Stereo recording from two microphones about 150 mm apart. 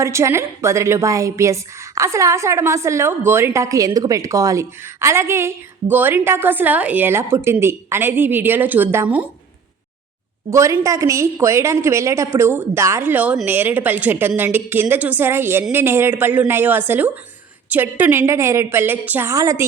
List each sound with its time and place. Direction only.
0.0 s a woman's voice: 20° right (ahead or behind)
10.5 s a woman's voice: 20° right (ahead or behind)